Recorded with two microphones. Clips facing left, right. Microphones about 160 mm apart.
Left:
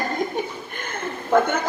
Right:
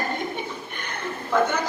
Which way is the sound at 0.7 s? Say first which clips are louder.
Left 3 dB; 45° left (ahead or behind).